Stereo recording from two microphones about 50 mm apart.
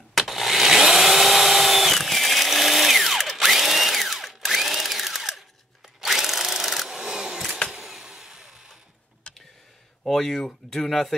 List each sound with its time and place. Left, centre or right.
0.1 s chainsaw: centre
5.9 s tools: centre
7.7 s vehicle: centre
9.3 s a sound: left
10.0 s speech: centre